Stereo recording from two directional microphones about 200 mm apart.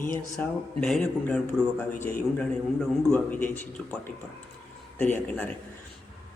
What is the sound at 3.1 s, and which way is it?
Speech, 10° left (ahead or behind).